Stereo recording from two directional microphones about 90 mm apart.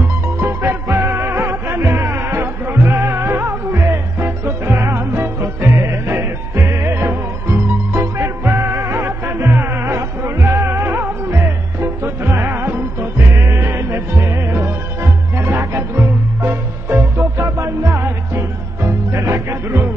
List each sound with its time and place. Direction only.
0.4 s music: 25° right (ahead or behind)